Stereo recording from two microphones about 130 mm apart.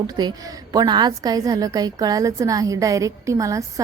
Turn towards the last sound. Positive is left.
turn(degrees=-25)  # may be behind; listen again after turning